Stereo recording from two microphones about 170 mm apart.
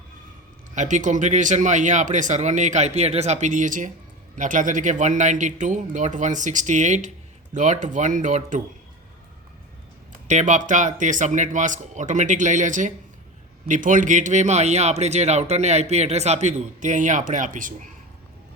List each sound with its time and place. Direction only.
0.8 s a man's voice: 45° right (ahead or behind)
10.2 s a man's voice: 45° right (ahead or behind)